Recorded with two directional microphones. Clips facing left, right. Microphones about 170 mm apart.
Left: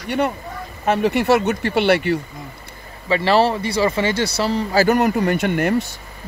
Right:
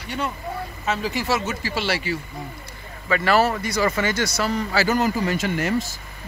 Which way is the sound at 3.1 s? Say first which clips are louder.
Left 3 dB; 30° left (ahead or behind).